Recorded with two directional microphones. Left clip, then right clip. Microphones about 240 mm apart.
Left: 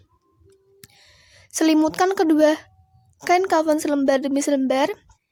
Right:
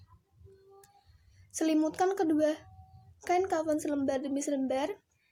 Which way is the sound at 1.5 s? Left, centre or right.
Left.